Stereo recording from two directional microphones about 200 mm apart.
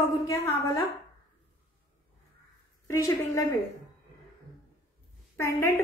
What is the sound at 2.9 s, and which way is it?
Speech, 15° left (ahead or behind).